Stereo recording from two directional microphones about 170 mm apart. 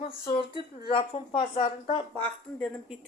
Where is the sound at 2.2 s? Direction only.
Centre (ahead or behind).